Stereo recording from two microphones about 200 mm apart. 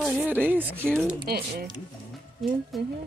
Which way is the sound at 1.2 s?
50° right (ahead or behind).